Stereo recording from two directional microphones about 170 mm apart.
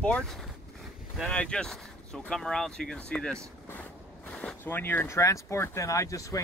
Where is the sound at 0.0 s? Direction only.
5° left (ahead or behind).